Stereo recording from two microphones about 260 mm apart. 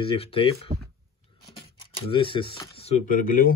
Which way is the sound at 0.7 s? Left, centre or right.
Right.